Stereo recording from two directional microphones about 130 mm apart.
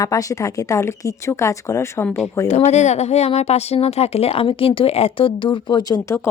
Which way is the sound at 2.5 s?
60° left (ahead or behind).